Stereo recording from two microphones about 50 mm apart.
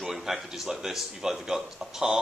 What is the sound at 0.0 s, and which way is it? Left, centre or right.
Speech, centre.